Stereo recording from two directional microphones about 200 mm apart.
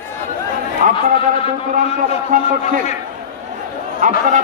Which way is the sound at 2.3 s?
45° right (ahead or behind).